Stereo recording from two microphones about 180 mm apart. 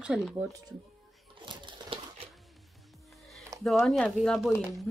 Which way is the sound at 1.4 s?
25° right (ahead or behind).